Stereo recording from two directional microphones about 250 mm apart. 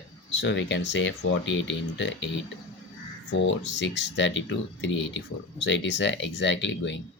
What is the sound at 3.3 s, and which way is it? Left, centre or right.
Speech, left.